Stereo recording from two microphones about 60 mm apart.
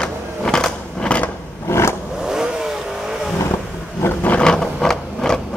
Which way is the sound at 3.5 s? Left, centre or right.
Left.